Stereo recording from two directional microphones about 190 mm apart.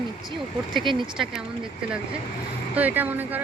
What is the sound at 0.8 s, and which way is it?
Speech, 25° right (ahead or behind).